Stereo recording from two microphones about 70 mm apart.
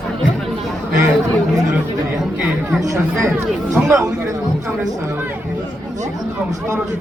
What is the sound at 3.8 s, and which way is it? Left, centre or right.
Speech, right.